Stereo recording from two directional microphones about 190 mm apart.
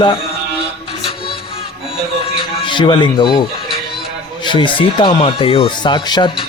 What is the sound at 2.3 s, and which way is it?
Music, 25° left (ahead or behind).